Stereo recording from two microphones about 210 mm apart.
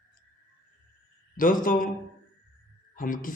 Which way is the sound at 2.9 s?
40° left (ahead or behind).